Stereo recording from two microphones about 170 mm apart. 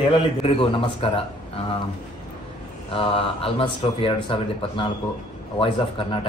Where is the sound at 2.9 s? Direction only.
35° left (ahead or behind).